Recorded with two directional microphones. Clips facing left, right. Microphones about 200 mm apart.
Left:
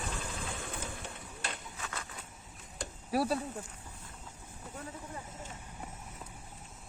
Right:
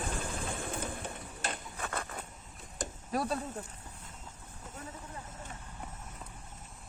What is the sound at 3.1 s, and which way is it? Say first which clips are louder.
Speech: left 3 dB; 5° left (ahead or behind).